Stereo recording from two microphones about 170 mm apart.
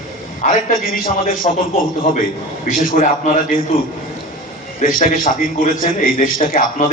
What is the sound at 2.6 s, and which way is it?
Speech, 55° left (ahead or behind).